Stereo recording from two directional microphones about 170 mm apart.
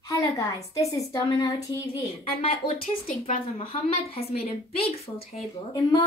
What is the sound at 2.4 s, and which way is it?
A woman's voice, 35° left (ahead or behind).